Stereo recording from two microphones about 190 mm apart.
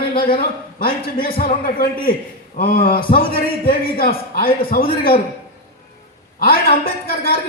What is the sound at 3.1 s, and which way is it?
A man's voice, 50° left (ahead or behind).